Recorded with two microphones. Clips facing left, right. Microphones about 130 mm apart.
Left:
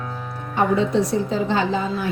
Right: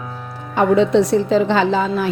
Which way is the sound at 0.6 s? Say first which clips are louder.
Right 5 dB; 90° right.